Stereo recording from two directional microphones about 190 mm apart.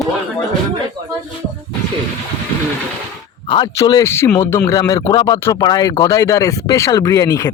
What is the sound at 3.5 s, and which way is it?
Speech, 25° left (ahead or behind).